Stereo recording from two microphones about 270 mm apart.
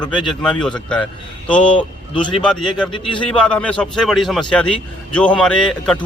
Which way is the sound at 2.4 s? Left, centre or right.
Centre.